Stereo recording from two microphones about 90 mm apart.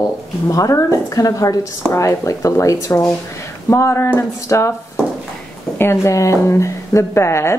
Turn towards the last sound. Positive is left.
turn(degrees=30)  # may be behind; listen again after turning